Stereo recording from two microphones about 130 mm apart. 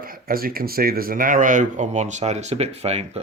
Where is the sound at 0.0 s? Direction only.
90° right.